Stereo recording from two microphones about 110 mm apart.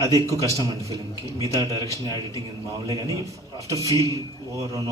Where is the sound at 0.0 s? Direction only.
30° right (ahead or behind).